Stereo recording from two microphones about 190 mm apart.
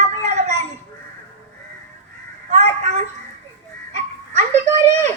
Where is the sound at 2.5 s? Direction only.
35° right (ahead or behind).